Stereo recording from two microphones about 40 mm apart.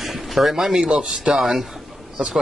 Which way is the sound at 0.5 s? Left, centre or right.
Centre.